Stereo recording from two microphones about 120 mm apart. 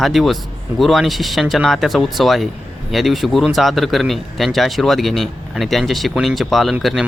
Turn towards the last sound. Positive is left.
turn(degrees=0)  # may be behind; listen again after turning